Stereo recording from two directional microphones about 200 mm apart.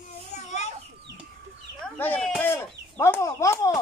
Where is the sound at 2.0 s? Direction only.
5° left (ahead or behind).